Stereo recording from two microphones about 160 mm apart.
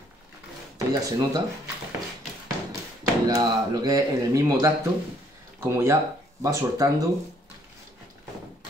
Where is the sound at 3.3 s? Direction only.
25° right (ahead or behind).